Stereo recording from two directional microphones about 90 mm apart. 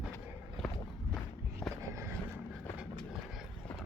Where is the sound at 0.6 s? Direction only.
Centre (ahead or behind).